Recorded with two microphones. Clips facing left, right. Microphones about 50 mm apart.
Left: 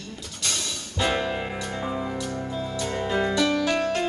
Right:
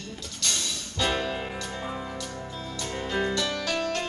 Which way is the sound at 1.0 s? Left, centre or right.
Centre.